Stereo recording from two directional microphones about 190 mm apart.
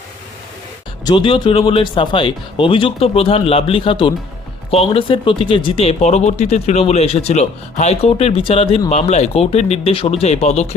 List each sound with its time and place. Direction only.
1.0 s speech: 25° left (ahead or behind)